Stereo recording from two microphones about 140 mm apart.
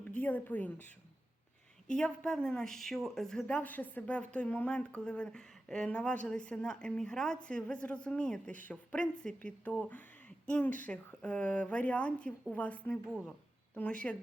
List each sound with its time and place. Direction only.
0.1 s a woman's voice: 10° left (ahead or behind)